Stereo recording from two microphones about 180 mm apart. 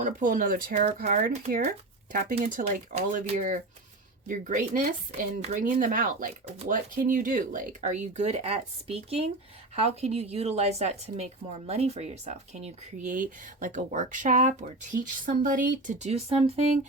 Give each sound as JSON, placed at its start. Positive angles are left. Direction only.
{"t": 0.0, "sound": "speech", "side_deg": -50}
{"t": 0.7, "sound": "a woman's voice", "side_deg": -40}
{"t": 0.9, "sound": "a woman's voice", "side_deg": -50}